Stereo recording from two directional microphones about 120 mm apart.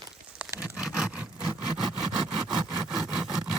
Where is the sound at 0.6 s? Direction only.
5° right (ahead or behind).